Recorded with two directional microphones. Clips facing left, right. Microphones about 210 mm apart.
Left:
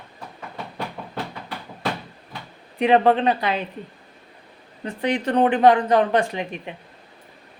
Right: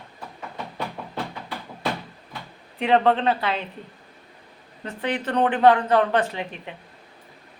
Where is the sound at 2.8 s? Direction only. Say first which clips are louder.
Left 3 dB; 15° left (ahead or behind).